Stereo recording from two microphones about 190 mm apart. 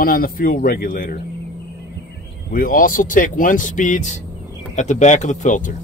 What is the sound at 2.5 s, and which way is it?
Speech, 45° left (ahead or behind).